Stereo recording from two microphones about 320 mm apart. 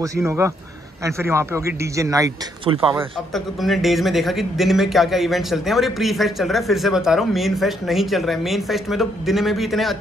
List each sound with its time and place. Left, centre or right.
0.0 s a man's voice: centre
3.3 s speech: centre